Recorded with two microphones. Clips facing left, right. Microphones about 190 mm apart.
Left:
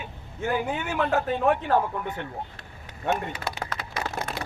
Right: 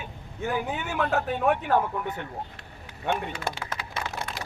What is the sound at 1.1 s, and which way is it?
Speech, centre (ahead or behind).